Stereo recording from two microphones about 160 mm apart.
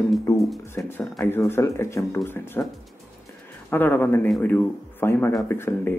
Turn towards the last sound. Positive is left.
turn(degrees=15)  # may be behind; listen again after turning